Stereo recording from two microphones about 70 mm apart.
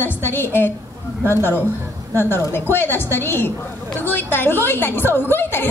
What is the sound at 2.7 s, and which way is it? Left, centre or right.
A woman's voice, left.